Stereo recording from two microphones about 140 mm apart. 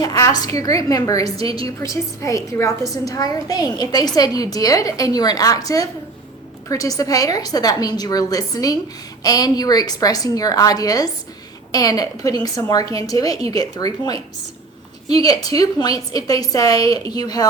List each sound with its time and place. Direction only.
0.0 s a woman's voice: 25° left (ahead or behind)